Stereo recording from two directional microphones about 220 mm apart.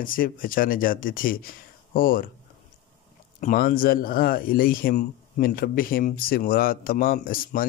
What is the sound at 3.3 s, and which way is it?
A man's voice, 40° left (ahead or behind).